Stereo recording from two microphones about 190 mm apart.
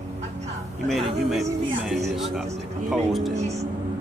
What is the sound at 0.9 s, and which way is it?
Speech, centre (ahead or behind).